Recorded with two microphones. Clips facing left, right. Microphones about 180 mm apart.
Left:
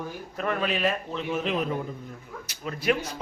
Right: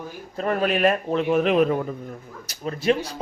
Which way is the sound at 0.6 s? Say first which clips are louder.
Right 8 dB; 50° right (ahead or behind).